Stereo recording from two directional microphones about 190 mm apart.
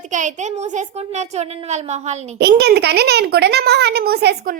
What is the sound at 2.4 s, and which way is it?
A child's voice, 60° right (ahead or behind).